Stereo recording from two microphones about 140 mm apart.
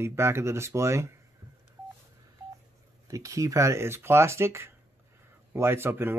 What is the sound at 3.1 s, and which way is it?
Speech, 25° right (ahead or behind).